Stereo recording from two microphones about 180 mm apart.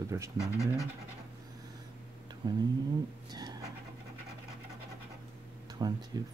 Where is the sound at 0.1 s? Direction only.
15° right (ahead or behind).